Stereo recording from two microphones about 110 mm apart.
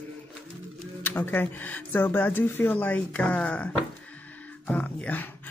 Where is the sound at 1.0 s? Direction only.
20° left (ahead or behind).